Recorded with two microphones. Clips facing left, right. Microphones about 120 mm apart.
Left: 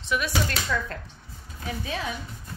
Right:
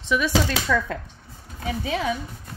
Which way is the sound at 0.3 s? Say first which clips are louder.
Right 5 dB; 90° right.